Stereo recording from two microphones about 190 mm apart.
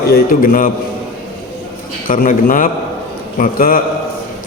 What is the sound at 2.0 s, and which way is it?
A man's voice, 45° left (ahead or behind).